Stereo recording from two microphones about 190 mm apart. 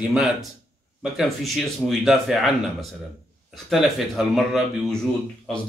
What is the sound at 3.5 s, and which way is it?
Speech, centre (ahead or behind).